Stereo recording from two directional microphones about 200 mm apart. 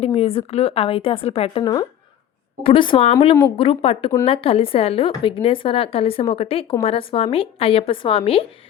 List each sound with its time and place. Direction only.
0.0 s a woman's voice: 30° left (ahead or behind)